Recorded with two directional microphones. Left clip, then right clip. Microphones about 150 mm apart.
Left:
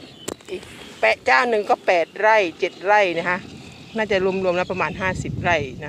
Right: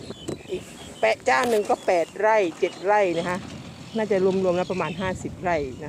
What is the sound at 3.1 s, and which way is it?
Speech, 5° right (ahead or behind).